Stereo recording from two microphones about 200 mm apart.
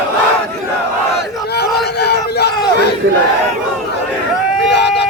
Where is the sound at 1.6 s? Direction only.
55° left (ahead or behind).